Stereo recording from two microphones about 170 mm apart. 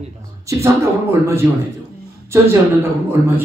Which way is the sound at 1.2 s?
15° right (ahead or behind).